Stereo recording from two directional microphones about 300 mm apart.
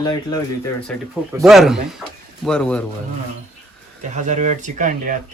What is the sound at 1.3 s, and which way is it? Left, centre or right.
Speech, centre.